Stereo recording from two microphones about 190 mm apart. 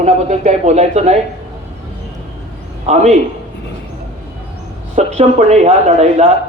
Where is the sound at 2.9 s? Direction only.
40° right (ahead or behind).